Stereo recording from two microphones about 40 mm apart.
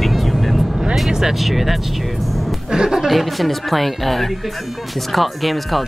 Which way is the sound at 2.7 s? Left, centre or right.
Centre.